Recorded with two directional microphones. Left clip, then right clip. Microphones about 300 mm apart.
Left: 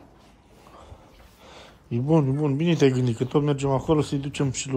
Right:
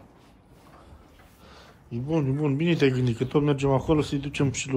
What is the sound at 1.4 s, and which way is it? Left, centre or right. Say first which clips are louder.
Speech: left 5 dB; left.